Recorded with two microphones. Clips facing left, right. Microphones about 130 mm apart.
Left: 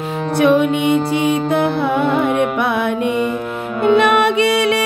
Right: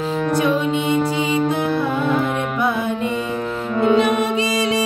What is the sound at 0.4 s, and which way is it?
Music, 65° left (ahead or behind).